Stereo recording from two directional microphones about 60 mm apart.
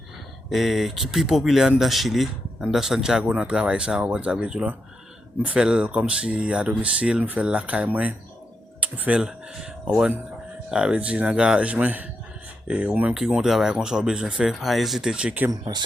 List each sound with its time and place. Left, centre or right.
0.5 s speech: centre; by 13.1 s right
13.1 s speech: centre
14.6 s speech: centre
15.1 s speech: centre